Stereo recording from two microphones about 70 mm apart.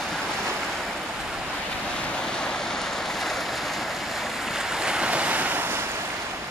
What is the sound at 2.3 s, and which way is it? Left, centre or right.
Waves, centre.